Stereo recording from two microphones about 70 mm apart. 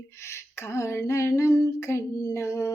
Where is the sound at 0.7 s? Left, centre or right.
Left.